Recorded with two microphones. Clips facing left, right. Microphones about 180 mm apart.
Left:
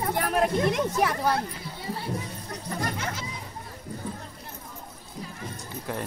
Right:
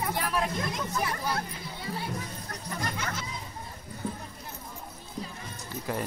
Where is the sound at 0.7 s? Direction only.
75° left (ahead or behind).